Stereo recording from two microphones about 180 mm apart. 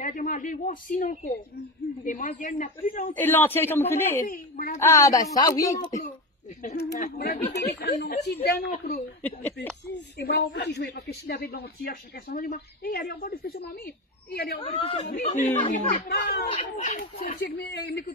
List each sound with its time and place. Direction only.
0.0 s a man's voice: 45° left (ahead or behind)
3.2 s speech: 10° left (ahead or behind)
4.2 s speech: 55° left (ahead or behind)
4.7 s speech: 15° left (ahead or behind)
6.7 s speech: 60° left (ahead or behind)
9.2 s speech: 10° left (ahead or behind)
9.9 s a man's voice: 70° left (ahead or behind)
14.6 s a man's voice: 35° left (ahead or behind)
15.1 s speech: 45° left (ahead or behind)
16.7 s speech: 45° left (ahead or behind)
17.6 s a man's voice: 65° left (ahead or behind)